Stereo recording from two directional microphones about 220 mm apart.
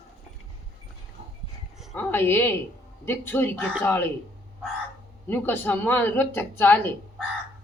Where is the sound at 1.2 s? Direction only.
30° right (ahead or behind).